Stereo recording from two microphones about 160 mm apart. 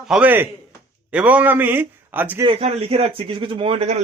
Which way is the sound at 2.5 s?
40° right (ahead or behind).